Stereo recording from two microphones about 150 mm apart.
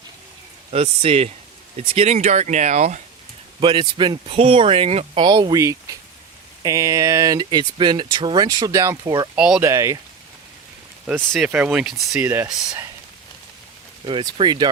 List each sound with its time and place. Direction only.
0.7 s speech: 40° right (ahead or behind)
3.6 s speech: 35° right (ahead or behind)
5.2 s speech: 30° right (ahead or behind)
9.3 s speech: 5° right (ahead or behind)
9.6 s speech: 20° right (ahead or behind)
11.1 s speech: 10° right (ahead or behind)
12.2 s speech: 15° right (ahead or behind)
14.0 s speech: 35° right (ahead or behind)